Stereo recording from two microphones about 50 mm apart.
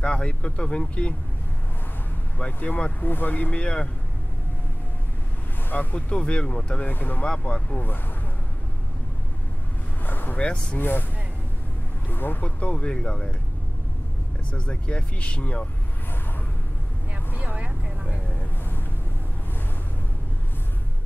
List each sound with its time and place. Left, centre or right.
0.0 s speech: left
2.3 s speech: left
3.5 s speech: left
5.7 s speech: left
5.9 s speech: left
6.9 s speech: left
7.2 s speech: left
10.0 s vehicle: left
10.3 s speech: left
10.8 s speech: left
12.1 s speech: left
12.4 s speech: left
14.5 s speech: left
17.4 s speech: right